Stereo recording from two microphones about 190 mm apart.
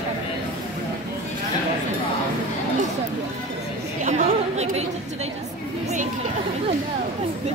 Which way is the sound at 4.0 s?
35° right (ahead or behind).